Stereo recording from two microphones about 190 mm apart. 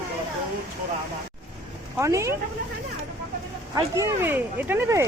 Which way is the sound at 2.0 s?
15° right (ahead or behind).